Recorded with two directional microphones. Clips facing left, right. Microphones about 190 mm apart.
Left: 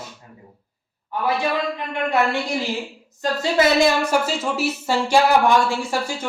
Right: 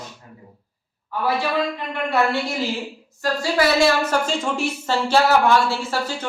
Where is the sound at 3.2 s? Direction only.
20° left (ahead or behind).